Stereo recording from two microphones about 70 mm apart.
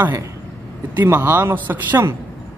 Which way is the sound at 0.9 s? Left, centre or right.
Right.